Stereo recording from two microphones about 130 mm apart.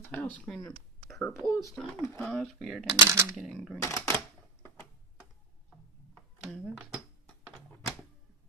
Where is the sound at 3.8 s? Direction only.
25° left (ahead or behind).